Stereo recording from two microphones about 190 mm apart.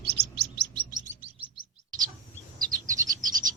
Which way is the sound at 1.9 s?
20° right (ahead or behind).